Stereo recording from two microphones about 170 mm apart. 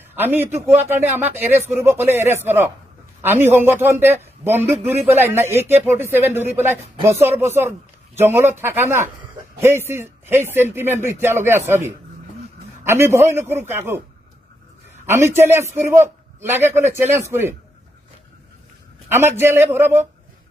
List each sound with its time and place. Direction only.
0.1 s a man's voice: 10° right (ahead or behind)
15.1 s speech: 15° right (ahead or behind)
19.1 s speech: 15° right (ahead or behind)